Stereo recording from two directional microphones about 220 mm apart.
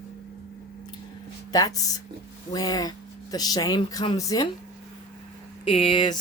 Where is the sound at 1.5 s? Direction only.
15° left (ahead or behind).